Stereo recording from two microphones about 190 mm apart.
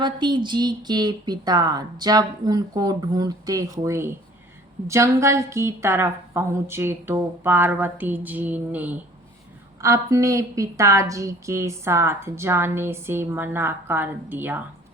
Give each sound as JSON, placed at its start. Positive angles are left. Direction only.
{"t": 0.0, "sound": "a woman's voice", "side_deg": -25}